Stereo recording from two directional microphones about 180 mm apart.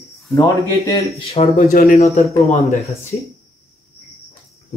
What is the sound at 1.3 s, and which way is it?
Speech, 35° left (ahead or behind).